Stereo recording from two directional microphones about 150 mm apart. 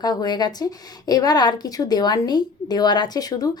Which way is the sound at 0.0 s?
25° left (ahead or behind).